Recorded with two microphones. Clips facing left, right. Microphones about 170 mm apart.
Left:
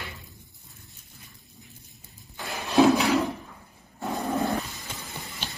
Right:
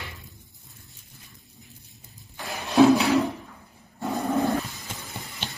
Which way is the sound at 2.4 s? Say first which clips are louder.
Even; centre (ahead or behind).